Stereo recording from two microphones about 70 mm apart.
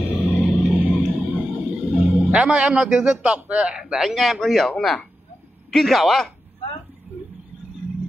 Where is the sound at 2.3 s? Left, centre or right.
Centre.